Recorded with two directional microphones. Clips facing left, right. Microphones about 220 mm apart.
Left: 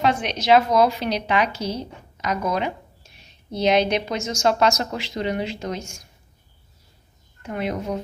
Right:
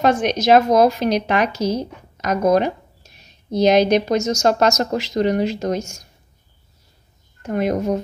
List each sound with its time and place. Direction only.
0.0 s speech: 45° right (ahead or behind)
7.4 s speech: 45° right (ahead or behind)